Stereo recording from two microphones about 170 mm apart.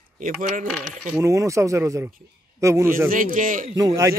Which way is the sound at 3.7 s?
20° right (ahead or behind).